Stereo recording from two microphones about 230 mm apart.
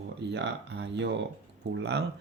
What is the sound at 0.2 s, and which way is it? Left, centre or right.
Speech, right.